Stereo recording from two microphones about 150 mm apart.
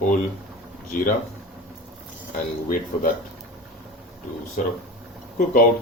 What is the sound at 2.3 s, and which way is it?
Speech, 65° left (ahead or behind).